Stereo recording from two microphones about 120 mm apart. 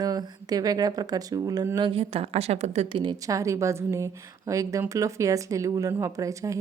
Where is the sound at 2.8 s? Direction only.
40° right (ahead or behind); by 6.6 s 25° right (ahead or behind).